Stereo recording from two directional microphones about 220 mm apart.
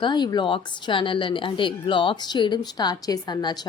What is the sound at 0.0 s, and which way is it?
A woman's voice, 20° left (ahead or behind).